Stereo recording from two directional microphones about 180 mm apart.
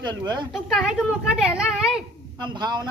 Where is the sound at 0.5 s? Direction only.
Centre (ahead or behind).